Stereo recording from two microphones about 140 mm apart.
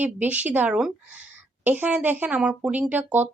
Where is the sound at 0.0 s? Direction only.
10° right (ahead or behind).